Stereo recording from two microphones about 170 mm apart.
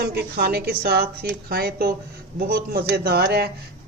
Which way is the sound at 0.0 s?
70° right (ahead or behind).